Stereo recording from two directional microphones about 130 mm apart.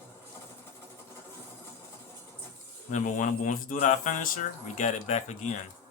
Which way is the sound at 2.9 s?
80° left.